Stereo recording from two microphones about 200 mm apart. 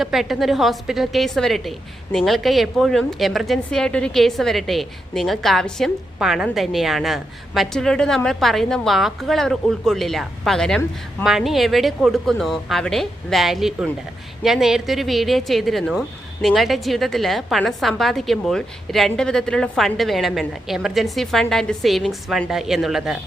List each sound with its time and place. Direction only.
0.0 s a woman's voice: centre (ahead or behind)